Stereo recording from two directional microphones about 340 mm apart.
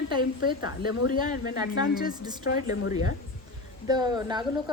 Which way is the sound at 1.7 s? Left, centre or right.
Left.